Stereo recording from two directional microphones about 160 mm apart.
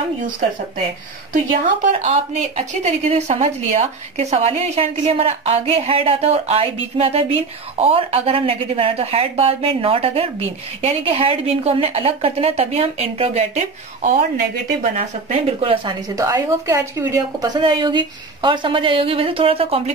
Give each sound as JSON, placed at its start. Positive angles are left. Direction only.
{"t": 1.3, "sound": "a woman's voice", "side_deg": -50}